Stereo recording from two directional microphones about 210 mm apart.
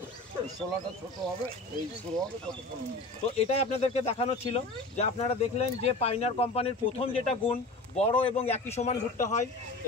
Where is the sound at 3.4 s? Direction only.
30° left (ahead or behind).